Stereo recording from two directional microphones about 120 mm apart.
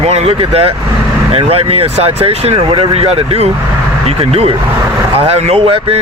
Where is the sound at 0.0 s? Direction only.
60° right (ahead or behind).